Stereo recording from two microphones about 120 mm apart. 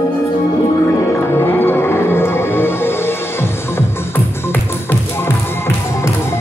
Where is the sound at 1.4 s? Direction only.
20° left (ahead or behind).